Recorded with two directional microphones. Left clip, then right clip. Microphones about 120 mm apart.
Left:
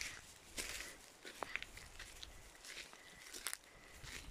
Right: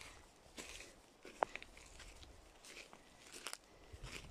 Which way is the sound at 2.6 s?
15° right (ahead or behind).